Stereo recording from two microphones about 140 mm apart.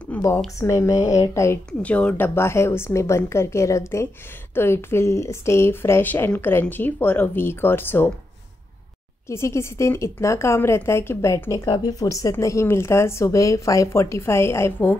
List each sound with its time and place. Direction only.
0.6 s a woman's voice: 20° left (ahead or behind)
1.7 s a woman's voice: 10° left (ahead or behind)
9.3 s a woman's voice: 20° left (ahead or behind)